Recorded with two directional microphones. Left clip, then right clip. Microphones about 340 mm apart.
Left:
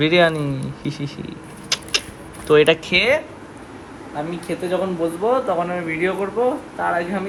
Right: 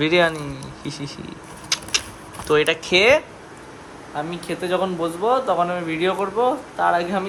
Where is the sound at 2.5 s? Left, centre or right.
Centre.